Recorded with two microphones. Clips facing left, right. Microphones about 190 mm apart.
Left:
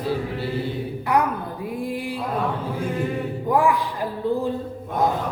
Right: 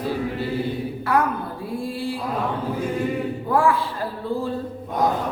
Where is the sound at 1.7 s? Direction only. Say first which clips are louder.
Right 1 dB; 15° left (ahead or behind).